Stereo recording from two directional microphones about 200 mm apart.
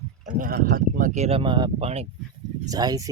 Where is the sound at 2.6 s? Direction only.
20° right (ahead or behind).